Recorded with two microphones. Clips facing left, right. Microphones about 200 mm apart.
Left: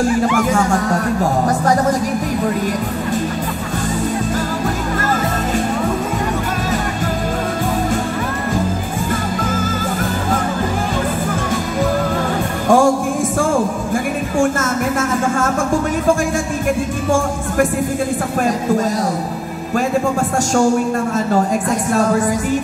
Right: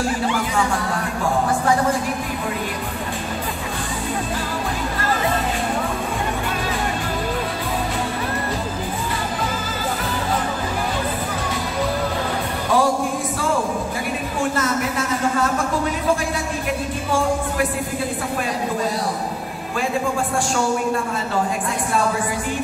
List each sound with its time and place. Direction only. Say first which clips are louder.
0.4 s music: left 6 dB; 45° left (ahead or behind)
12.6 s music: left 7 dB; 45° left (ahead or behind)
14.4 s a sound: left 4 dB; 45° left (ahead or behind)
21.6 s a woman's voice: left 5 dB; 45° left (ahead or behind)